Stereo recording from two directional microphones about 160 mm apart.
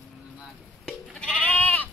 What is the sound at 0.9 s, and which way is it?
Goat, 5° left (ahead or behind).